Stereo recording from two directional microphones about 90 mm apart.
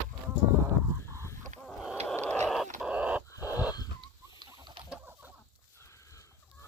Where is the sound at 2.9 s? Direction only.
15° right (ahead or behind).